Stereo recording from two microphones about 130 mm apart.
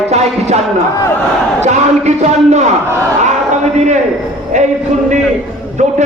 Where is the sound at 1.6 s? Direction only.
60° right (ahead or behind).